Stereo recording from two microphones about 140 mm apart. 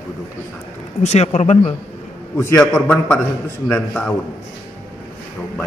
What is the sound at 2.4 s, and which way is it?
Speech, 20° left (ahead or behind).